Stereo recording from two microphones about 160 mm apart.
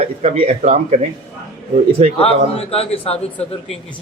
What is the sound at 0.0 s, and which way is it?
Speech, 40° right (ahead or behind).